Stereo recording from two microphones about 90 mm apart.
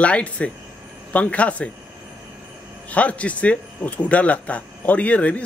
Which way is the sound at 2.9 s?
15° left (ahead or behind).